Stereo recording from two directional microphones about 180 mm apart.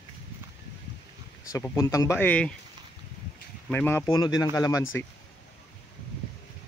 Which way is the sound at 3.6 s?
10° left (ahead or behind).